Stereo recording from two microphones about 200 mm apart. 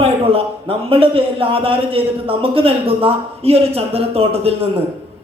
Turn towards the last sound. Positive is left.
turn(degrees=-30)  # may be behind; listen again after turning